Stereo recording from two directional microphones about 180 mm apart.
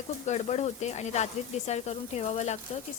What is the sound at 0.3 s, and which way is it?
A woman's voice, 40° left (ahead or behind).